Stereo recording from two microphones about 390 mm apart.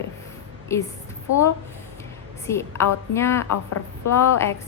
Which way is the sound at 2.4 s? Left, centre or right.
Centre.